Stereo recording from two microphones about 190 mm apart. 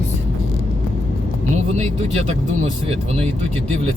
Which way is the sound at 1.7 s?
35° right (ahead or behind).